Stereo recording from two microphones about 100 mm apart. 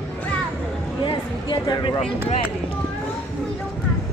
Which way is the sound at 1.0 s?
50° left (ahead or behind).